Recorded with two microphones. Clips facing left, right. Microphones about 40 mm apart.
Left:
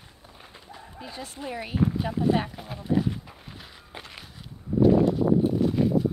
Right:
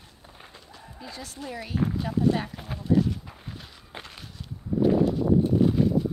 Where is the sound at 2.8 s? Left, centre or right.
Centre.